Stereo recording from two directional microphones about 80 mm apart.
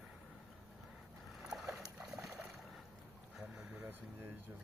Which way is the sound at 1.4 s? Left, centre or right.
Centre.